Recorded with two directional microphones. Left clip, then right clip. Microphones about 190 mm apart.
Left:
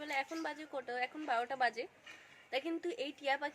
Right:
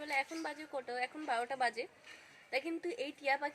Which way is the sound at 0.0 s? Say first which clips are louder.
Right 1 dB; 5° left (ahead or behind).